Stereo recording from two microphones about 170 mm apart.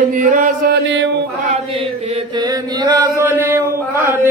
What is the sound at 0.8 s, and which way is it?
Chant, 90° right.